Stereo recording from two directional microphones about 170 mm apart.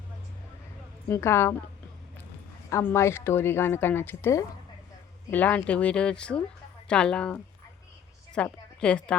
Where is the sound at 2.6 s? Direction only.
15° left (ahead or behind).